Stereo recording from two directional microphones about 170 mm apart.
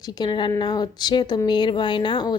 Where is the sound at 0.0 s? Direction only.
25° left (ahead or behind).